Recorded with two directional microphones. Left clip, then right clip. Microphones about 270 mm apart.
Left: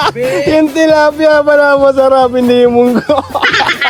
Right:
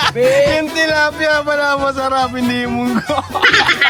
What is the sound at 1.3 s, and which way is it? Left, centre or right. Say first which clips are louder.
Speech: left 8 dB; right.